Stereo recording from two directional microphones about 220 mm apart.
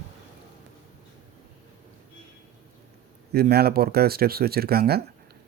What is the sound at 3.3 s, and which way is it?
Speech, 45° right (ahead or behind).